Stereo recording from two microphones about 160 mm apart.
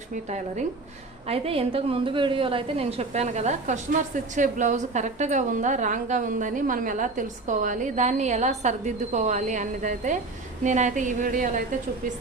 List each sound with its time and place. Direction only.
0.3 s a woman's voice: 45° right (ahead or behind)
1.3 s a woman's voice: 35° right (ahead or behind); by 11.6 s 55° right (ahead or behind)